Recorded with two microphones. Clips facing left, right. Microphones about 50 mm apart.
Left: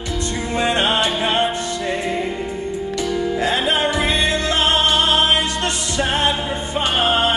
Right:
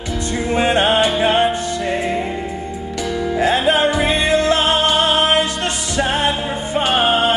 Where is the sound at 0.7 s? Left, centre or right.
Right.